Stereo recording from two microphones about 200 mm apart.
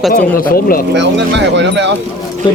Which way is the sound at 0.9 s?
60° right (ahead or behind).